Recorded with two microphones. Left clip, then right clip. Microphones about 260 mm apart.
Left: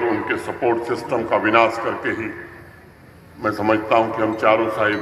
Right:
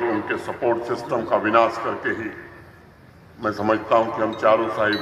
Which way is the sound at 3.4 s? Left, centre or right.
Left.